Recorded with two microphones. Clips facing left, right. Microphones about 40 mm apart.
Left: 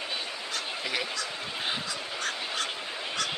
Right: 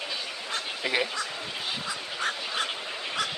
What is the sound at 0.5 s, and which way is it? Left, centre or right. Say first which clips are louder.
Duck: right 5 dB; right.